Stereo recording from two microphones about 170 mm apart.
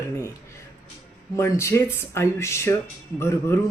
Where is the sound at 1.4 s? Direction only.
15° left (ahead or behind).